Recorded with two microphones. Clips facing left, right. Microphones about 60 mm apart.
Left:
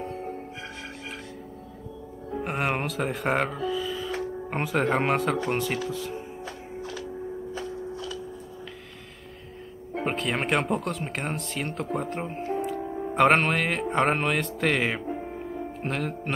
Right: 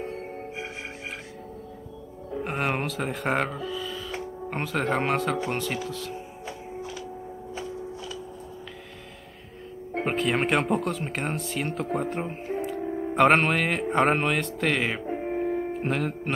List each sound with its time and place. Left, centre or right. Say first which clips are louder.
2.4 s speech: even; centre
6.4 s music: even; centre
10.0 s speech: right 2 dB; centre
15.0 s music: right 5 dB; right
15.8 s speech: right 2 dB; centre